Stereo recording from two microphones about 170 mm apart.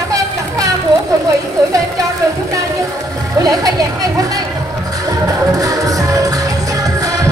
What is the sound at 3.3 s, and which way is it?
Speech, 20° right (ahead or behind).